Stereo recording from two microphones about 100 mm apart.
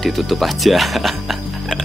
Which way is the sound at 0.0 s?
Centre (ahead or behind).